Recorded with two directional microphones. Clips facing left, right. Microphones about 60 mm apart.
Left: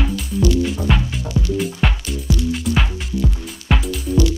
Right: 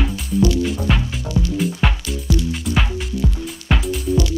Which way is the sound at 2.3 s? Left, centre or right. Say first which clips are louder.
Right 1 dB; left.